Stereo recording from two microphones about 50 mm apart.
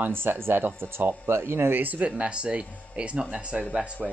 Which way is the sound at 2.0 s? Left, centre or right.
Right.